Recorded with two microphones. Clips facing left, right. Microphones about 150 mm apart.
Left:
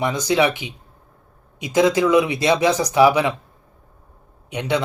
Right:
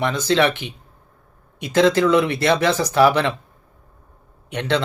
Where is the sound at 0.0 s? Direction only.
15° left (ahead or behind).